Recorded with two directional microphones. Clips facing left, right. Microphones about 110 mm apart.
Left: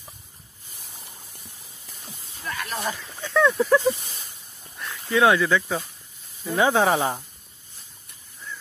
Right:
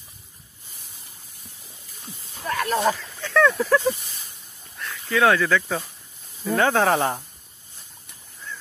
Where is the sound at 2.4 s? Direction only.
65° right (ahead or behind).